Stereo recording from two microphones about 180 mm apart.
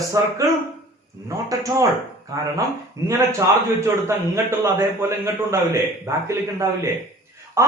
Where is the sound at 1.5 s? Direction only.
20° right (ahead or behind).